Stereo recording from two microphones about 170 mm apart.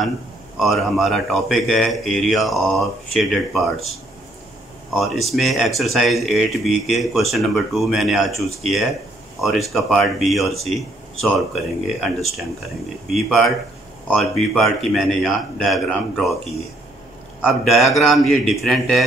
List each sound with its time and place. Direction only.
0.6 s speech: centre (ahead or behind)
17.4 s speech: centre (ahead or behind)